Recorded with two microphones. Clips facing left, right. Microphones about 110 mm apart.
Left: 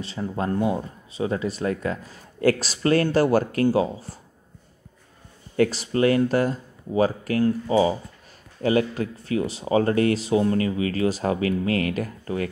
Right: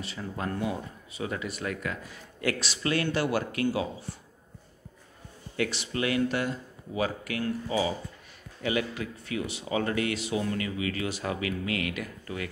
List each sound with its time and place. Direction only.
0.0 s speech: 30° left (ahead or behind)
5.6 s speech: 40° left (ahead or behind)